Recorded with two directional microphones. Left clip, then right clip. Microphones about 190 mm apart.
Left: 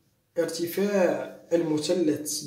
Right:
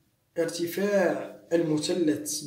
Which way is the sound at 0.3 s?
15° right (ahead or behind).